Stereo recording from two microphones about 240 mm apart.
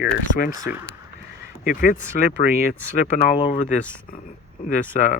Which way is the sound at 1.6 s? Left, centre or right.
Left.